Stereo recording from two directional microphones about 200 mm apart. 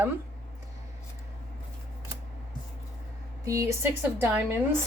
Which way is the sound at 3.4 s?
15° right (ahead or behind).